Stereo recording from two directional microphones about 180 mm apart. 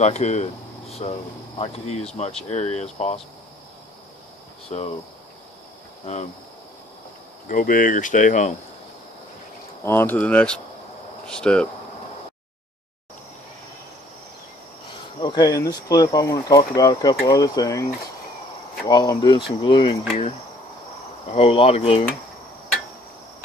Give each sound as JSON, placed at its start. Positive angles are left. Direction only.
{"t": 0.0, "sound": "speech", "side_deg": 40}
{"t": 4.6, "sound": "speech", "side_deg": 35}
{"t": 7.4, "sound": "speech", "side_deg": 50}
{"t": 9.8, "sound": "speech", "side_deg": 10}
{"t": 15.1, "sound": "speech", "side_deg": 25}
{"t": 18.9, "sound": "speech", "side_deg": 25}
{"t": 21.3, "sound": "speech", "side_deg": 35}